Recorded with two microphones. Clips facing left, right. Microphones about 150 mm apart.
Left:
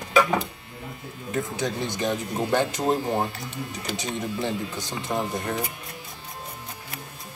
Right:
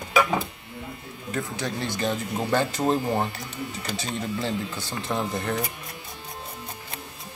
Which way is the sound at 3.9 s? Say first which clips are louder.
Left 1 dB; 15° left (ahead or behind).